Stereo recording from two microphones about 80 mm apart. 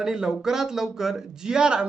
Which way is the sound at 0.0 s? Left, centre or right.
Centre.